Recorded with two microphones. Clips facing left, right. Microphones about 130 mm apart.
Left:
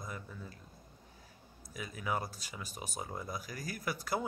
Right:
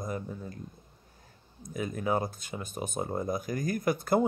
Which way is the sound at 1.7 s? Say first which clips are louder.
Right 8 dB; 45° right (ahead or behind).